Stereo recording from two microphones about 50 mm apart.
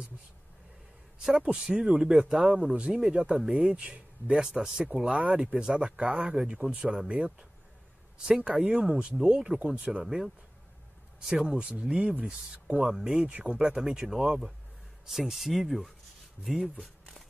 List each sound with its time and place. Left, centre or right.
1.2 s speech: centre
2.6 s speech: centre
3.7 s speech: right
8.5 s speech: centre
10.0 s speech: centre
11.4 s speech: centre
13.3 s speech: right; by 16.7 s centre